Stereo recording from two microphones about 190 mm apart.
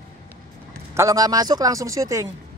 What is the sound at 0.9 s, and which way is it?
Speech, 20° right (ahead or behind).